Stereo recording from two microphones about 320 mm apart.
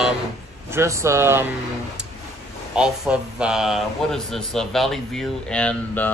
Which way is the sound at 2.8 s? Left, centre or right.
Centre.